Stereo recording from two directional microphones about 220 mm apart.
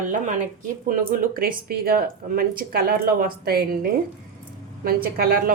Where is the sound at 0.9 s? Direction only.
40° right (ahead or behind).